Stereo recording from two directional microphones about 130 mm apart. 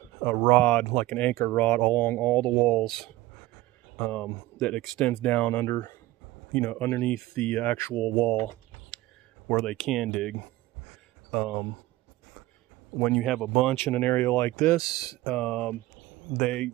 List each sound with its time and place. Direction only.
0.2 s speech: 10° left (ahead or behind)
9.5 s speech: 5° left (ahead or behind)
13.0 s speech: centre (ahead or behind)
13.7 s speech: 15° left (ahead or behind)
14.8 s speech: 30° left (ahead or behind)
15.2 s speech: 5° left (ahead or behind)